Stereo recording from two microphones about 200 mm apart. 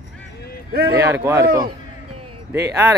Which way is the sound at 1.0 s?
10° right (ahead or behind).